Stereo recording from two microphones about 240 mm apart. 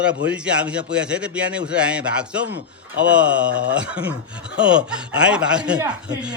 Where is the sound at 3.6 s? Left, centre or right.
Centre.